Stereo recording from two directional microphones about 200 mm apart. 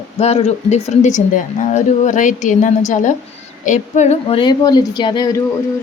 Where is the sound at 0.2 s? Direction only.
30° left (ahead or behind).